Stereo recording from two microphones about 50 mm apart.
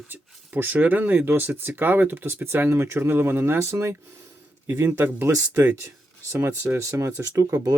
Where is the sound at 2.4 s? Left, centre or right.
Right.